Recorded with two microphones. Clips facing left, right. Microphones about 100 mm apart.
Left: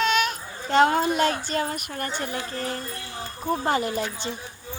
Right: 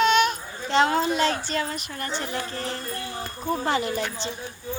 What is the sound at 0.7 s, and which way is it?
Speech, 45° left (ahead or behind).